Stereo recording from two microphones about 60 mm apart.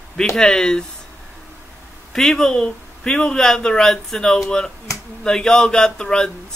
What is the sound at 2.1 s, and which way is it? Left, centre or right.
A man's voice, centre.